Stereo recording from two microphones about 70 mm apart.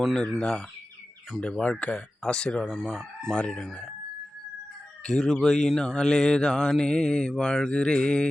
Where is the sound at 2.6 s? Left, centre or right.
Centre.